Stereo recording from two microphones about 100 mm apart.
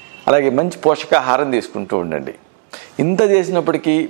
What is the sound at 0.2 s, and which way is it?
A man's voice, 20° right (ahead or behind).